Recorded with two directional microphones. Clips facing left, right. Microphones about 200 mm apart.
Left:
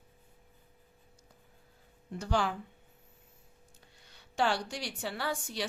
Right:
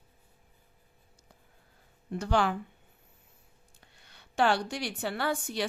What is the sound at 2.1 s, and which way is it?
Speech, 65° right (ahead or behind).